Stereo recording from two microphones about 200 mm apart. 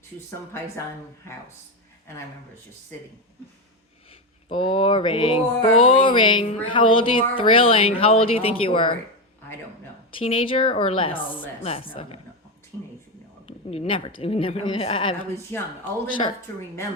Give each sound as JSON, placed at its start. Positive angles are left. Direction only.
{"t": 4.4, "sound": "speech", "side_deg": 25}
{"t": 10.2, "sound": "speech", "side_deg": 25}
{"t": 13.7, "sound": "speech", "side_deg": 25}
{"t": 15.5, "sound": "speech", "side_deg": 10}